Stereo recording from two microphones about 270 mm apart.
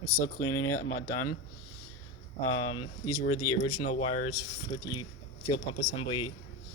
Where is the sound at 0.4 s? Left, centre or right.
Left.